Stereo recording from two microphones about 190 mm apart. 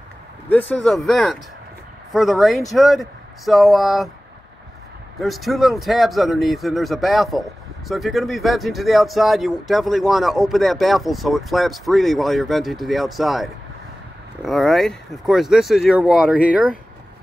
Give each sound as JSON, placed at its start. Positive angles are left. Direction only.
{"t": 0.5, "sound": "speech", "side_deg": 10}
{"t": 5.2, "sound": "speech", "side_deg": 0}